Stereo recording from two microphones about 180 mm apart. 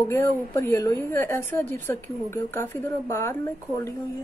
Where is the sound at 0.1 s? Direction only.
15° left (ahead or behind).